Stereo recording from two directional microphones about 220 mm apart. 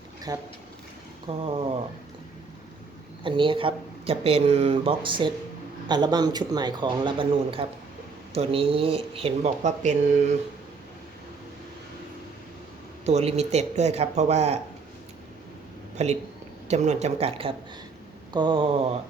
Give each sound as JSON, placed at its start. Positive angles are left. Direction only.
{"t": 0.3, "sound": "speech", "side_deg": -15}
{"t": 3.2, "sound": "speech", "side_deg": -20}
{"t": 13.1, "sound": "speech", "side_deg": -30}
{"t": 16.0, "sound": "speech", "side_deg": -30}